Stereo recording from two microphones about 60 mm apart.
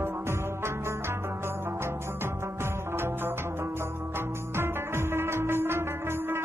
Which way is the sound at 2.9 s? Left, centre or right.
Right.